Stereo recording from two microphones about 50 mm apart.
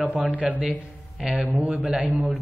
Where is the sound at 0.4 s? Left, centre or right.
Right.